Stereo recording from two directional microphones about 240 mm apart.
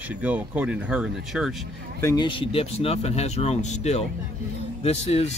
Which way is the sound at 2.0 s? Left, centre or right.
Centre.